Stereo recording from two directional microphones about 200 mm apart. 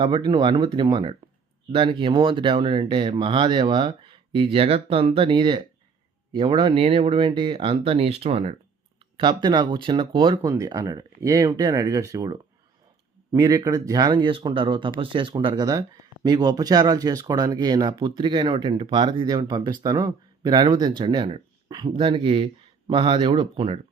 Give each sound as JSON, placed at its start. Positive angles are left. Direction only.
{"t": 0.0, "sound": "speech", "side_deg": -25}